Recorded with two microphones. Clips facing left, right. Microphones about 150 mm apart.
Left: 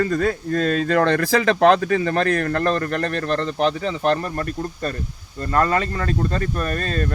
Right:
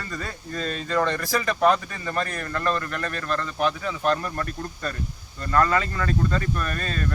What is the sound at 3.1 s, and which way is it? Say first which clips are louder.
Speech: left 6 dB; 35° left (ahead or behind).